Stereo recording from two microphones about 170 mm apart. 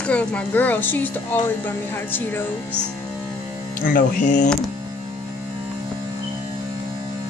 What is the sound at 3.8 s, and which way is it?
Speech, 55° left (ahead or behind).